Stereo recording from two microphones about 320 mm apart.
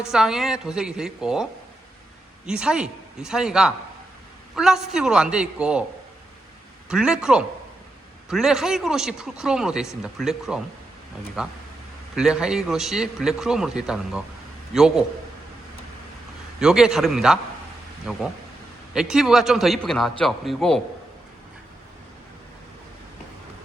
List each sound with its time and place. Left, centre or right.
0.0 s speech: centre
2.5 s speech: centre
6.8 s speech: centre
16.6 s speech: centre